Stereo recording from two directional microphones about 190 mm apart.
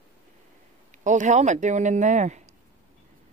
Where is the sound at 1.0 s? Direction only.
40° right (ahead or behind).